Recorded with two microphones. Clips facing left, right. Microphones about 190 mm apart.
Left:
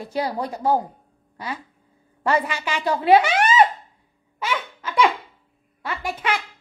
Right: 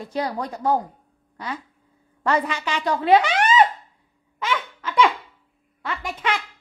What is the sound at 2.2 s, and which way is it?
A woman's voice, 10° left (ahead or behind).